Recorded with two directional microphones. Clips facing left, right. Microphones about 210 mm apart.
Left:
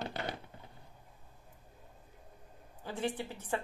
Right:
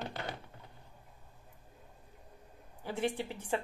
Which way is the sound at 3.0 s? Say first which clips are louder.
Right 2 dB; 10° right (ahead or behind).